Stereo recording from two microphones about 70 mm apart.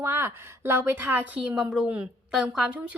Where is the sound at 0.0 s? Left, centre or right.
Right.